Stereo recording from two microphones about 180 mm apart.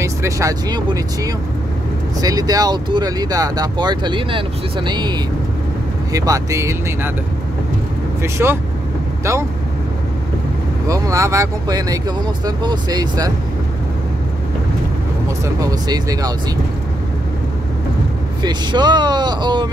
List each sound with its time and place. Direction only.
0.0 s speech: 15° right (ahead or behind)
6.1 s speech: 20° right (ahead or behind)
8.2 s speech: 15° right (ahead or behind)
10.9 s speech: 15° right (ahead or behind)
15.4 s speech: 20° right (ahead or behind)
18.4 s speech: 25° right (ahead or behind)